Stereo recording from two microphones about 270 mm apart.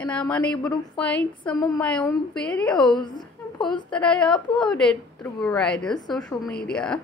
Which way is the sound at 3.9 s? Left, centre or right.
Centre.